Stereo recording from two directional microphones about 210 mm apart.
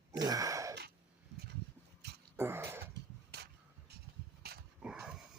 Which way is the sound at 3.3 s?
50° right (ahead or behind).